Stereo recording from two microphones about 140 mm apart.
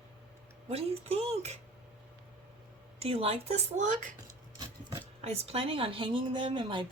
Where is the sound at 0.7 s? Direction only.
45° right (ahead or behind).